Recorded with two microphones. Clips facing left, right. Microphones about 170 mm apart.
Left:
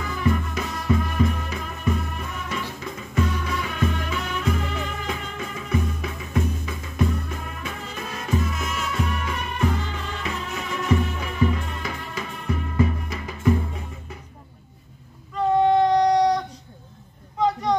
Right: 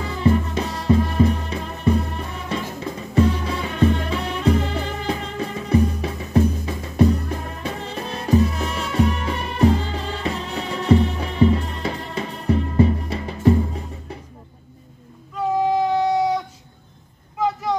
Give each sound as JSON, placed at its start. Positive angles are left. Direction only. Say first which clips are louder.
{"t": 0.0, "sound": "music", "louder": "right 5 dB", "side_deg": -30}
{"t": 15.3, "sound": "child singing", "louder": "left 2 dB", "side_deg": -5}
{"t": 17.4, "sound": "vehicle", "louder": "left 1 dB", "side_deg": -5}